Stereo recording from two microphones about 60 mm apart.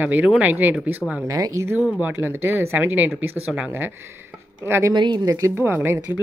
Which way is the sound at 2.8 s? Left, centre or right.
Right.